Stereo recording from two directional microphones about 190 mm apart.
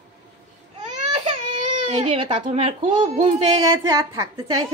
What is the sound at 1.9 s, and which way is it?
A child's voice, 25° right (ahead or behind).